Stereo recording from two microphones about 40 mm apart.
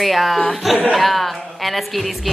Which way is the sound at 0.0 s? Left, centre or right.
Centre.